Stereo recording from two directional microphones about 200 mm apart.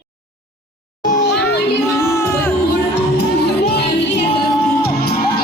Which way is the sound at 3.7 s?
55° left (ahead or behind).